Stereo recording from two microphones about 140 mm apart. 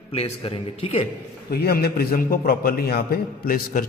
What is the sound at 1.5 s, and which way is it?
A man's voice, 90° left.